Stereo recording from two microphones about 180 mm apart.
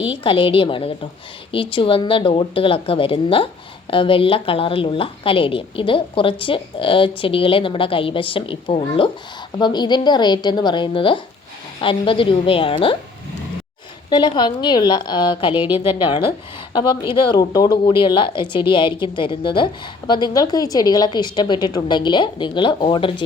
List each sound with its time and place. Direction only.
0.0 s speech: 30° left (ahead or behind)
14.1 s speech: 25° left (ahead or behind)
15.5 s a woman's voice: 10° right (ahead or behind)
16.0 s speech: 25° left (ahead or behind)